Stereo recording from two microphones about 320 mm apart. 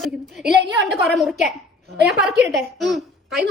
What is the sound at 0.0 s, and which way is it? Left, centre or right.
A woman's voice, centre.